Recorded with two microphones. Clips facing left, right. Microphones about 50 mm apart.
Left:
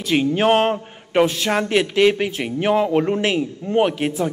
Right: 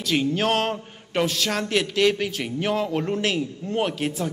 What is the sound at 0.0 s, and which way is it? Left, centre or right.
A man's voice, left.